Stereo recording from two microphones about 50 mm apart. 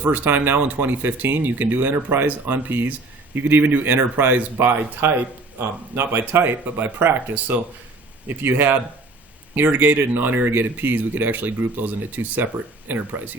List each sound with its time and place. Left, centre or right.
0.0 s speech: right